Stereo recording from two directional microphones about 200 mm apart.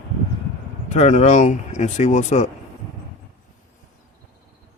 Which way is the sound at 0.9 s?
35° left (ahead or behind).